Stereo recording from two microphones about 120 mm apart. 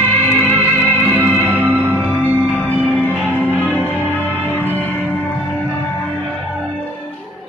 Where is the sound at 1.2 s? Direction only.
15° right (ahead or behind).